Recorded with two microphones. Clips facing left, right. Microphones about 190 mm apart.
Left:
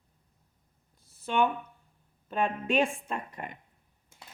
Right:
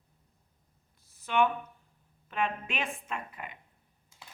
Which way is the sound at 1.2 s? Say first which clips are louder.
Even; 30° left (ahead or behind).